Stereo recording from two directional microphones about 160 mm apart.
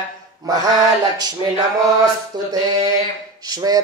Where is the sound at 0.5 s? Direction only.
25° right (ahead or behind).